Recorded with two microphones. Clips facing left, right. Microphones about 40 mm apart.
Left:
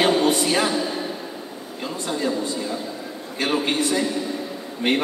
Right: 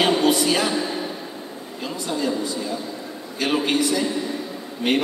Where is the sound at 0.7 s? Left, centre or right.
Right.